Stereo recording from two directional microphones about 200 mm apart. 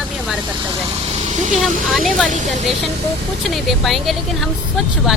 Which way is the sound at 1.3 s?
35° right (ahead or behind).